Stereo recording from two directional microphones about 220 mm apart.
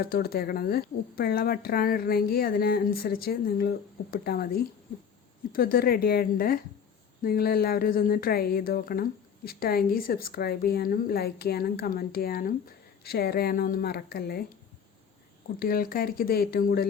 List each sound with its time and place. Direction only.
0.0 s speech: 45° left (ahead or behind)
15.5 s speech: 40° left (ahead or behind)